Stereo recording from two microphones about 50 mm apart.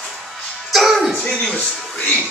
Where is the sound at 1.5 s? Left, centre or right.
Left.